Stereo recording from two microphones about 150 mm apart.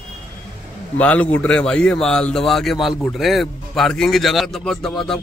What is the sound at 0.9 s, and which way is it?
Speech, 10° left (ahead or behind).